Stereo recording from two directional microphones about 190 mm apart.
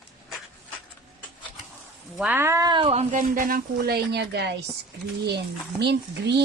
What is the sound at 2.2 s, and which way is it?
Speech, 10° right (ahead or behind).